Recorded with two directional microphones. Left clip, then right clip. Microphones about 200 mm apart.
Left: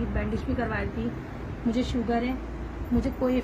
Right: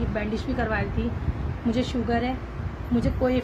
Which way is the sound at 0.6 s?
45° right (ahead or behind).